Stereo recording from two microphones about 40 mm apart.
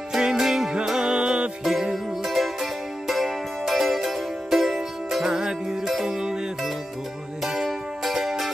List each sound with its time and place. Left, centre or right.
0.1 s music: centre
0.8 s music: centre
1.6 s music: centre
5.3 s music: centre
7.4 s music: centre